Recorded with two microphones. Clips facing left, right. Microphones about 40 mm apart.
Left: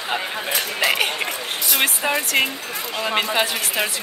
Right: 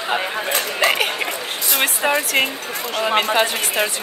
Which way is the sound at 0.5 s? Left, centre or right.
Right.